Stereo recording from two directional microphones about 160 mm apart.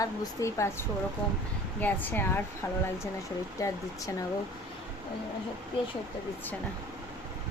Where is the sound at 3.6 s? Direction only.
20° left (ahead or behind).